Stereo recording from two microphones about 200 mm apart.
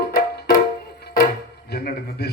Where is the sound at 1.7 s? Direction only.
50° left (ahead or behind).